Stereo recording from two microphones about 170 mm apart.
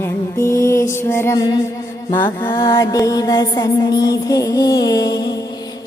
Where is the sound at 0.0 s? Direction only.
15° left (ahead or behind).